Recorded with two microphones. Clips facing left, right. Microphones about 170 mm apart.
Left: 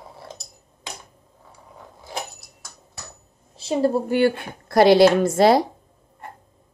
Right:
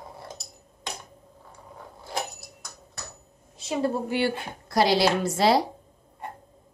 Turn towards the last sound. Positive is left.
turn(degrees=50)  # may be behind; listen again after turning